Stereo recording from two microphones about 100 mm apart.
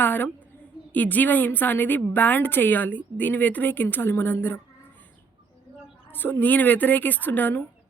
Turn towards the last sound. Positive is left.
turn(degrees=20)  # may be behind; listen again after turning